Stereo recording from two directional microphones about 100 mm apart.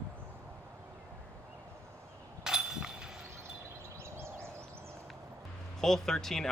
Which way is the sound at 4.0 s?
25° right (ahead or behind).